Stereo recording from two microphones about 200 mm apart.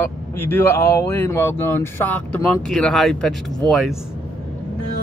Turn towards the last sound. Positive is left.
turn(degrees=0)  # may be behind; listen again after turning